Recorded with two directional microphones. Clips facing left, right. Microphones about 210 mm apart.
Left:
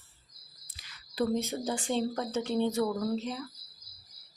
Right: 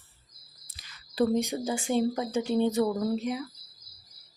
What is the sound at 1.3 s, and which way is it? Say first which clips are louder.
Speech: right 3 dB; 15° right (ahead or behind).